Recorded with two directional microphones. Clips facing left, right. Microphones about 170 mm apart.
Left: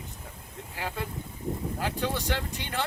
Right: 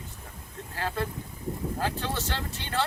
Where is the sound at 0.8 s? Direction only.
15° left (ahead or behind).